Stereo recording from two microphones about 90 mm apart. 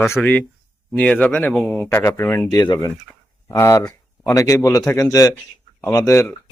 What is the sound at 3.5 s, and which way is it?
A man's voice, 30° left (ahead or behind).